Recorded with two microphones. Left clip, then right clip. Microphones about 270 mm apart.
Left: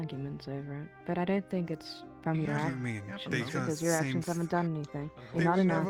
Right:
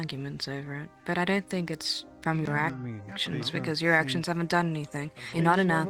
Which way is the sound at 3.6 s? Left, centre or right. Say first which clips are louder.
Right 9 dB; right.